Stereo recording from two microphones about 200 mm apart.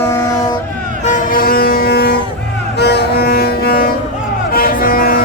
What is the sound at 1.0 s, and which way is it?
Vehicle, 45° left (ahead or behind).